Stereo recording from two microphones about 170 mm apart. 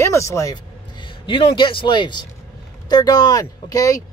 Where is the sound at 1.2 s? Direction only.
30° left (ahead or behind).